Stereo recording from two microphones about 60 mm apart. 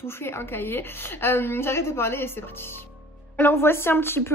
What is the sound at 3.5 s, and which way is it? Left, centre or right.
Speech, left.